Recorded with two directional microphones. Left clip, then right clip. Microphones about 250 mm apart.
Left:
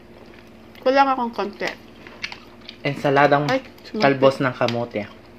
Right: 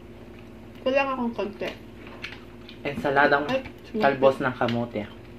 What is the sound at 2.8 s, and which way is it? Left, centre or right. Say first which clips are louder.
Speech: left 4 dB; left.